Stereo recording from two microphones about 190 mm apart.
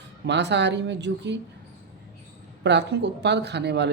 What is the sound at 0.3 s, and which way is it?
Speech, 65° right (ahead or behind).